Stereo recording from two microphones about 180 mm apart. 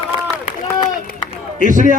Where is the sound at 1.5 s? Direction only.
45° right (ahead or behind).